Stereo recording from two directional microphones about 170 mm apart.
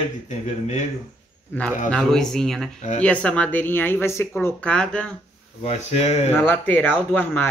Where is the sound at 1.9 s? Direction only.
5° left (ahead or behind).